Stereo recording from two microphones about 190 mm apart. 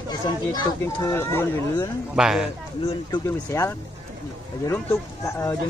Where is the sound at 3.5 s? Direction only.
15° left (ahead or behind).